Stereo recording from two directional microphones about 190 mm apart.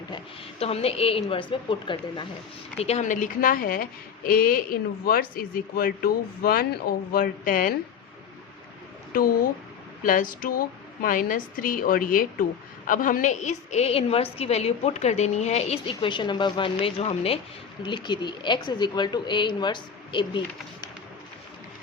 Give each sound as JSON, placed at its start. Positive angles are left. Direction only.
{"t": 0.6, "sound": "a woman's voice", "side_deg": 30}
{"t": 9.1, "sound": "a woman's voice", "side_deg": 50}